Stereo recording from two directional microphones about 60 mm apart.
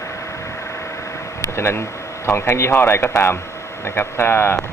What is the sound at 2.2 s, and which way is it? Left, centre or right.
A man's voice, left.